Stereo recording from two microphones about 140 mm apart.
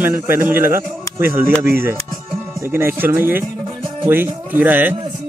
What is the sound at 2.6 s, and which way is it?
Speech, 15° right (ahead or behind).